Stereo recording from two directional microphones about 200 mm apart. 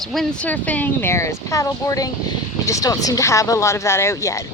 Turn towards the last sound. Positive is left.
turn(degrees=15)  # may be behind; listen again after turning